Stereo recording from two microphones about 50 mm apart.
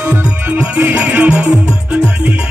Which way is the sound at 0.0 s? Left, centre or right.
Right.